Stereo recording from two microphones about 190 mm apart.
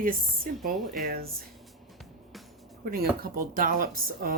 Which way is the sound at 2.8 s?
50° right (ahead or behind).